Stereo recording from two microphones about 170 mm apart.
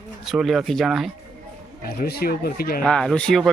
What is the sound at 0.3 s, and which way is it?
Speech, centre (ahead or behind).